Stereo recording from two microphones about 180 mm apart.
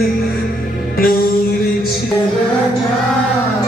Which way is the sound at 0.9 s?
55° left (ahead or behind).